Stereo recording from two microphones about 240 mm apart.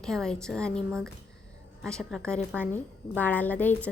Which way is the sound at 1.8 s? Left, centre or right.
Centre.